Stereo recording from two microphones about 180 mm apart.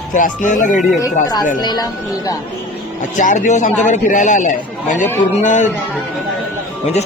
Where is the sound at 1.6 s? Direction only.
20° left (ahead or behind).